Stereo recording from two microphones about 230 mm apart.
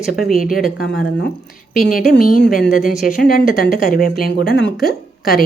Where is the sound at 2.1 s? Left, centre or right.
Left.